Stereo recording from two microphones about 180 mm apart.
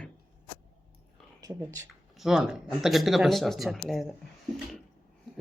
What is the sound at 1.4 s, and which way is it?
Speech, 20° right (ahead or behind).